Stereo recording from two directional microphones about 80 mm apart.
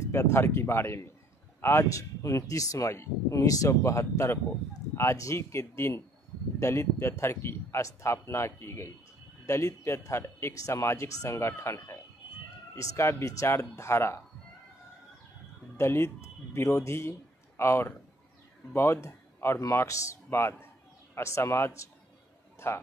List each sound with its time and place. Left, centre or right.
0.1 s speech: left
15.8 s speech: left